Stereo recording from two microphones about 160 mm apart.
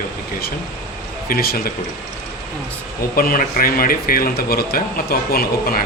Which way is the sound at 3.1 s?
65° left (ahead or behind).